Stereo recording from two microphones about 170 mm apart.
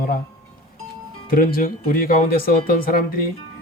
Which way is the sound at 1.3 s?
55° left (ahead or behind).